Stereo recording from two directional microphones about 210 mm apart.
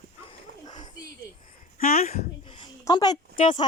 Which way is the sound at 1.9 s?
30° left (ahead or behind).